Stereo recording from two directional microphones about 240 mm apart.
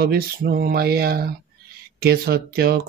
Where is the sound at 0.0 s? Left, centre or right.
Right.